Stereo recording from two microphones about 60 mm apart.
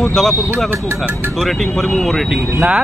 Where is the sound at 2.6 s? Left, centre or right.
Centre.